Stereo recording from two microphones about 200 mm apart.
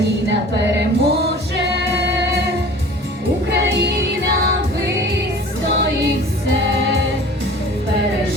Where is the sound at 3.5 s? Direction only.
55° right (ahead or behind).